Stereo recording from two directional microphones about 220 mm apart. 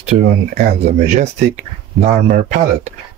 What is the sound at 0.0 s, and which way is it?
Speech, 35° right (ahead or behind).